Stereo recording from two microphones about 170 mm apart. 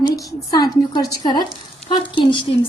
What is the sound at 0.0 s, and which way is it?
A woman's voice, 20° left (ahead or behind).